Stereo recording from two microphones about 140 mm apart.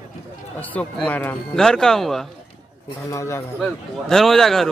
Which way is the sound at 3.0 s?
20° left (ahead or behind).